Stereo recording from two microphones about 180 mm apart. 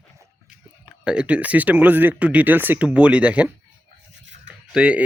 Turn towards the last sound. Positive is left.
turn(degrees=-5)  # may be behind; listen again after turning